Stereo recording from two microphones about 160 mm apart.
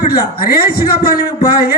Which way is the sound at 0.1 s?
70° left (ahead or behind).